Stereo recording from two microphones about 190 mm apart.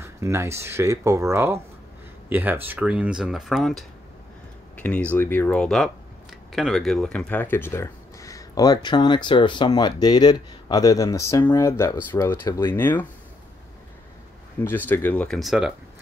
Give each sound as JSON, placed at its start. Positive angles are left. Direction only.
{"t": 0.0, "sound": "speech", "side_deg": -15}
{"t": 14.9, "sound": "speech", "side_deg": 10}